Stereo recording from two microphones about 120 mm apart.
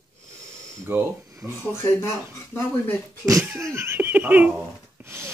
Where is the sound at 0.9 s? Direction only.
15° right (ahead or behind).